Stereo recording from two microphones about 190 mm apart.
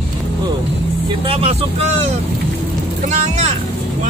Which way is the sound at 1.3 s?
30° right (ahead or behind).